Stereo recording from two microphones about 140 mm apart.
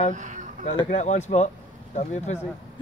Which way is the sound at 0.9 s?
55° left (ahead or behind).